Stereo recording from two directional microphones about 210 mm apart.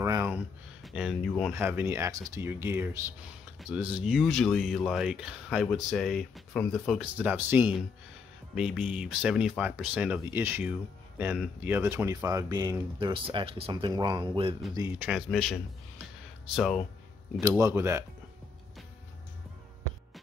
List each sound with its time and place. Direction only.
0.0 s a sound: 15° right (ahead or behind)
0.8 s speech: centre (ahead or behind)
7.0 s speech: 10° right (ahead or behind)
14.8 s speech: 10° right (ahead or behind)
17.4 s speech: 15° right (ahead or behind)